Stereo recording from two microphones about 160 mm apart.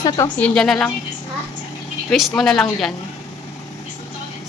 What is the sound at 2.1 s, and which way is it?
Speech, centre (ahead or behind).